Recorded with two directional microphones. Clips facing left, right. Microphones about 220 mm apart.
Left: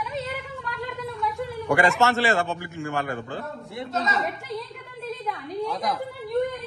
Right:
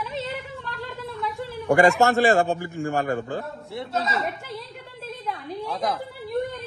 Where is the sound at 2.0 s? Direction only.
45° right (ahead or behind).